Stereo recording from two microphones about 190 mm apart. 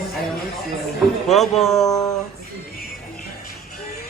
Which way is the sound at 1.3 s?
Centre (ahead or behind).